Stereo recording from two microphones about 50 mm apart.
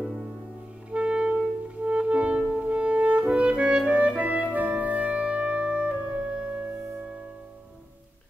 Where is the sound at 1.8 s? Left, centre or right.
Right.